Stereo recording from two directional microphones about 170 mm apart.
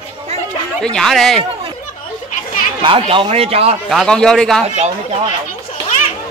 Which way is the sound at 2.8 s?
30° right (ahead or behind).